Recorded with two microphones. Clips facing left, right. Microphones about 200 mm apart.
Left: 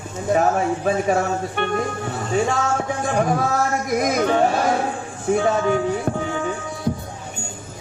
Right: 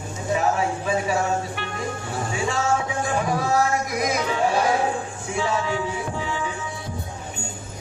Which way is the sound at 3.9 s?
50° left (ahead or behind).